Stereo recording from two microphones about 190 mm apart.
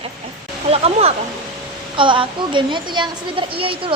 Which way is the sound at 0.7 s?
30° right (ahead or behind).